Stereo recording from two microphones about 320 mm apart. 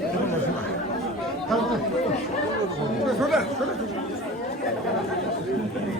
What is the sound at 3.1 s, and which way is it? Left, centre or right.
Speech, centre.